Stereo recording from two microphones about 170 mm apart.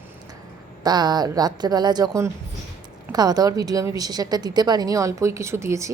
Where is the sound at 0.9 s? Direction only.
25° right (ahead or behind).